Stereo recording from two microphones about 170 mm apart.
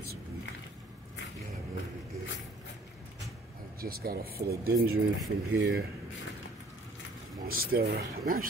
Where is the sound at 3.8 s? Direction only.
60° right (ahead or behind).